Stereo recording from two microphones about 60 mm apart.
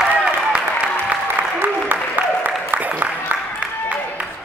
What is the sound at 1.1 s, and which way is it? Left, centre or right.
Applause, right.